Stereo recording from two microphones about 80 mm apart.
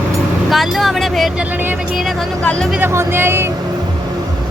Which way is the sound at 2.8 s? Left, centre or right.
Right.